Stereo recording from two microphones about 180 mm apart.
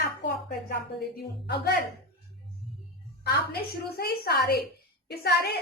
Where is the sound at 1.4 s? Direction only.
60° left (ahead or behind).